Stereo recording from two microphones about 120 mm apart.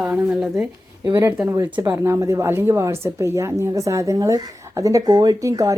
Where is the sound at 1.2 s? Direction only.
20° right (ahead or behind).